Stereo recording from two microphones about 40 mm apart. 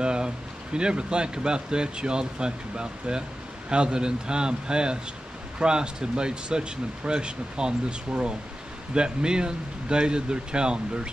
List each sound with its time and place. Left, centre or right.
0.0 s a sound: right
0.7 s speech: right
8.9 s speech: right